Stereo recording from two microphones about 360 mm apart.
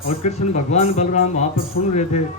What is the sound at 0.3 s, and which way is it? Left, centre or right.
A man's voice, centre.